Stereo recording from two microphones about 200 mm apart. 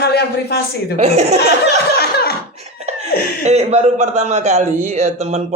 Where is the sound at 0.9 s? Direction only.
35° right (ahead or behind).